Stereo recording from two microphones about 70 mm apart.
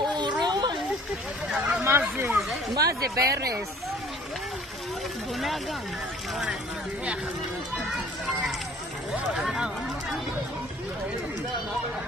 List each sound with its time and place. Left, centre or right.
0.0 s a sound: right
1.6 s speech: right
2.9 s speech: right
9.3 s run: centre